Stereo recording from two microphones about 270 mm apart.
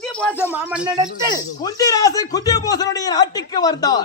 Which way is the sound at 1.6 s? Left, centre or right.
Centre.